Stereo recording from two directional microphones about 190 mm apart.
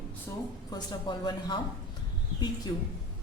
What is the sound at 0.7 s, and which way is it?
Speech, 20° left (ahead or behind).